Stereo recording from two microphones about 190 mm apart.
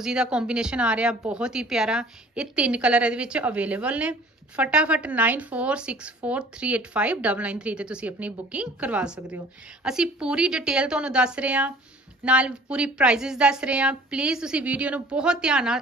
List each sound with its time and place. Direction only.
0.0 s a woman's voice: 5° right (ahead or behind)